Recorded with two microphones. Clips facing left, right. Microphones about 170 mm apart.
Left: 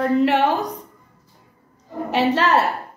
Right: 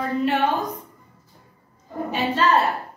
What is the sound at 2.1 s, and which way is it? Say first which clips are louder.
Speech: left 5 dB; 75° left (ahead or behind).